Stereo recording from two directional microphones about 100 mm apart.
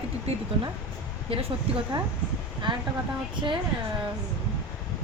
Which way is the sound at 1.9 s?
50° right (ahead or behind).